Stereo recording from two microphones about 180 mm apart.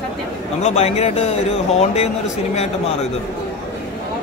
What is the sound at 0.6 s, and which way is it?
Speech, 35° left (ahead or behind).